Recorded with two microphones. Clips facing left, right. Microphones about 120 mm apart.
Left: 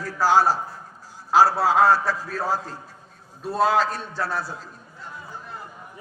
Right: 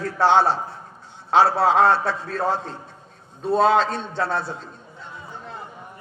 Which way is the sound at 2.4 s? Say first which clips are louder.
Right 4 dB; 5° left (ahead or behind).